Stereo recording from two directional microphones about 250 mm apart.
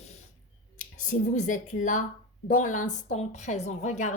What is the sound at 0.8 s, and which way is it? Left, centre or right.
A woman's voice, left.